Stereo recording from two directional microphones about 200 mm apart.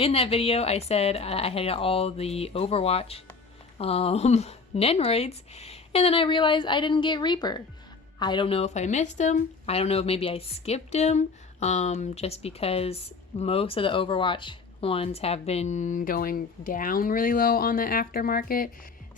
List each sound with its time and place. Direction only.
0.0 s speech: 30° left (ahead or behind); by 18.7 s 45° left (ahead or behind)